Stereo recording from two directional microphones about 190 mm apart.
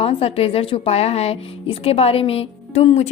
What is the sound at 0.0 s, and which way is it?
Speech, 30° left (ahead or behind).